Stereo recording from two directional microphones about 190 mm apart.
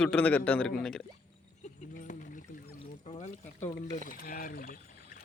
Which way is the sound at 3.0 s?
40° left (ahead or behind).